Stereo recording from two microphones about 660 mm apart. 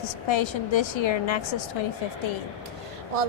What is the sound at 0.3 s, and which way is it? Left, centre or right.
A woman's voice, left.